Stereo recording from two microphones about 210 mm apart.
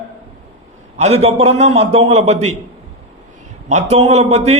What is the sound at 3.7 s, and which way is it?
Speech, 35° right (ahead or behind).